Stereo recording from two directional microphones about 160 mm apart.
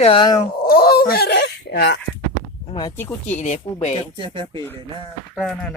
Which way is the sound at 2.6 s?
25° left (ahead or behind).